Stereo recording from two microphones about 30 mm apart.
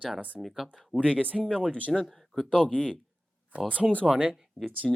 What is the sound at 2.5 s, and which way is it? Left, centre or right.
Speech, left.